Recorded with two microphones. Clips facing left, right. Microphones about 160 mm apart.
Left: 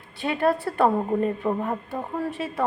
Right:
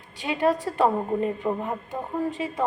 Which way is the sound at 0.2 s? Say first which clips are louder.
Left 1 dB; 15° right (ahead or behind).